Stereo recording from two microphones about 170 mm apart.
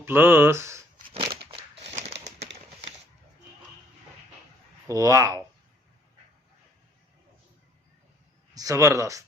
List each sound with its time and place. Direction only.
0.0 s speech: 10° right (ahead or behind)
1.1 s crushing: 30° right (ahead or behind)
1.9 s a sound: 40° right (ahead or behind)
4.9 s speech: 20° right (ahead or behind)
8.5 s speech: 20° right (ahead or behind)